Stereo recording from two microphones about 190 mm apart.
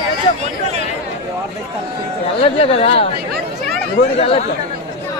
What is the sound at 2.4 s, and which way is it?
Speech, 30° left (ahead or behind).